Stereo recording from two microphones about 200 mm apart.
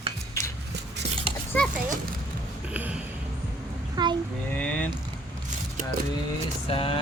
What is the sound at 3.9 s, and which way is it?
Speech, 20° right (ahead or behind).